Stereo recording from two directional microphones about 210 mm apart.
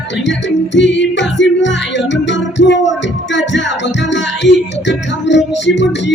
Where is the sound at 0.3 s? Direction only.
60° left (ahead or behind).